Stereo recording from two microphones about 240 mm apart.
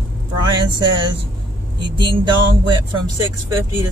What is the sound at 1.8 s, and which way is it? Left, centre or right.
Speech, centre.